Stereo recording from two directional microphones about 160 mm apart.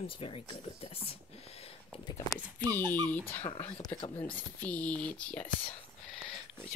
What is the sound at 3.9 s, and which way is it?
Speech, 30° left (ahead or behind).